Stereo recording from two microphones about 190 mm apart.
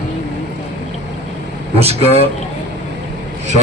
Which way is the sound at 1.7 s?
30° right (ahead or behind).